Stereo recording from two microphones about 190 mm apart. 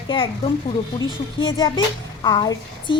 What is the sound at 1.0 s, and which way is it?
Speech, 90° left.